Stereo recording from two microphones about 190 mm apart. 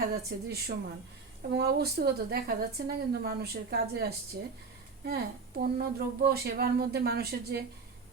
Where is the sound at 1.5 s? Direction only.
55° right (ahead or behind).